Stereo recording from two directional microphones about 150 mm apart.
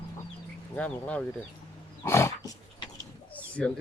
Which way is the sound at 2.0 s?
20° left (ahead or behind).